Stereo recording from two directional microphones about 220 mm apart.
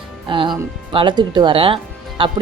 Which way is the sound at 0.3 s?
20° right (ahead or behind).